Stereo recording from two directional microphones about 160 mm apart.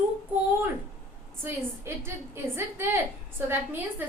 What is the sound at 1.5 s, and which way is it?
A woman's voice, 15° right (ahead or behind).